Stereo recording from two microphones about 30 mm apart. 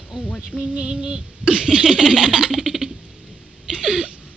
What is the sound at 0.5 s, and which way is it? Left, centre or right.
Music, left.